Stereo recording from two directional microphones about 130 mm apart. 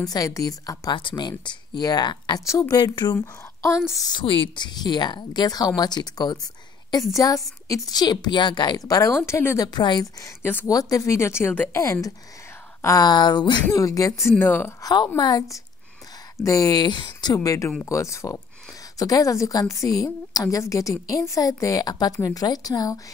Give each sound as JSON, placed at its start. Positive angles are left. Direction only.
{"t": 0.0, "sound": "speech", "side_deg": 30}
{"t": 3.2, "sound": "a woman's voice", "side_deg": 20}
{"t": 9.7, "sound": "speech", "side_deg": 35}
{"t": 10.4, "sound": "speech", "side_deg": 15}
{"t": 10.7, "sound": "a woman's voice", "side_deg": 25}
{"t": 14.8, "sound": "a woman's voice", "side_deg": 30}